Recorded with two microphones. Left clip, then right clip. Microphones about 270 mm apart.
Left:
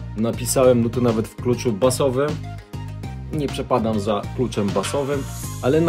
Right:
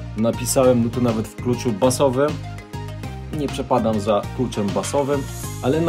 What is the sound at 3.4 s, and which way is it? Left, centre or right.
Speech, centre.